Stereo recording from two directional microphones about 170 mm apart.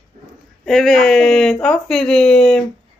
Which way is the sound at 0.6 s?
Centre (ahead or behind).